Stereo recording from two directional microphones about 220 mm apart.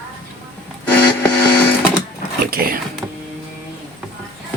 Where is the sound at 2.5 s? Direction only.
40° right (ahead or behind).